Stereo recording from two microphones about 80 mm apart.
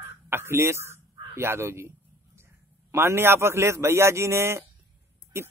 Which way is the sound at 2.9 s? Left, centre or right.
Right.